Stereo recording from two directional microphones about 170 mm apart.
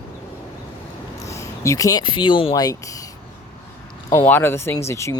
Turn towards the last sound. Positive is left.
turn(degrees=15)  # may be behind; listen again after turning